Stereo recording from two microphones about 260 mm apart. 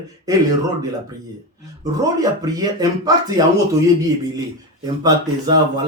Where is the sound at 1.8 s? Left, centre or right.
Centre.